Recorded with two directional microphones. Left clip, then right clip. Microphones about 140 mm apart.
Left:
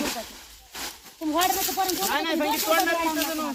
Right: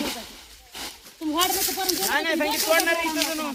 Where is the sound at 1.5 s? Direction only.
70° left (ahead or behind).